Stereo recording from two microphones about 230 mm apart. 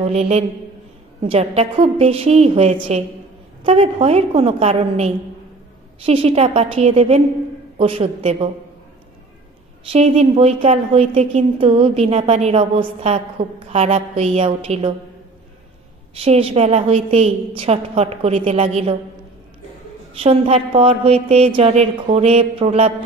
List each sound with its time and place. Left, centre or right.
0.1 s a woman's voice: right
9.8 s a woman's voice: right
16.2 s a woman's voice: right
20.2 s a woman's voice: right